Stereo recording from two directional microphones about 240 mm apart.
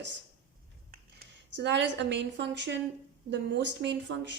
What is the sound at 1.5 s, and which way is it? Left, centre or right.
Speech, right.